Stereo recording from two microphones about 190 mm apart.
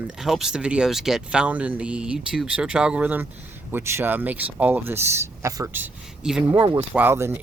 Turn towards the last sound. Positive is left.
turn(degrees=-10)  # may be behind; listen again after turning